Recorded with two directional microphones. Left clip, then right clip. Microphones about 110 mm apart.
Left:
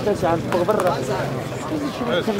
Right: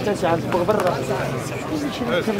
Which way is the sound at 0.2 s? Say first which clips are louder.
Even; 35° right (ahead or behind).